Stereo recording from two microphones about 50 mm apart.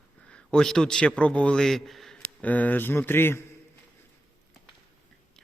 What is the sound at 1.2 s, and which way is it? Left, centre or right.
Speech, left.